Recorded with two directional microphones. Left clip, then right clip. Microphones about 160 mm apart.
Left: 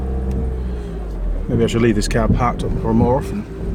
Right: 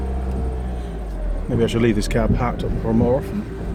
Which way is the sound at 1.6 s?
5° left (ahead or behind).